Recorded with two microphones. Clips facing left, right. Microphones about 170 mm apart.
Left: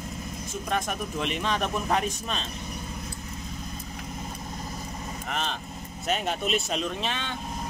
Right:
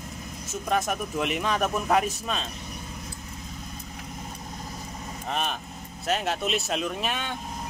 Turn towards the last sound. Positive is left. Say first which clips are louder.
# right 1 dB
turn(degrees=-10)  # may be behind; listen again after turning